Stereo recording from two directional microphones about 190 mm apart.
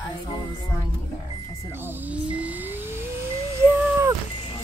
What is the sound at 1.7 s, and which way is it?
Speech, 10° right (ahead or behind).